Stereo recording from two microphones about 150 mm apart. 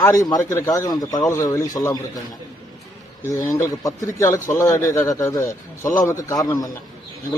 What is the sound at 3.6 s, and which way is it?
A man's voice, 20° left (ahead or behind).